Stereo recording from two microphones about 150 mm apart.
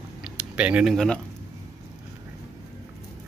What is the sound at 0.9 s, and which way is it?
Speech, 5° left (ahead or behind).